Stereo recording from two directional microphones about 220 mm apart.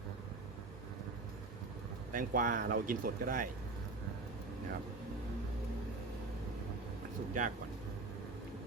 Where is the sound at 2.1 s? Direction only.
35° right (ahead or behind).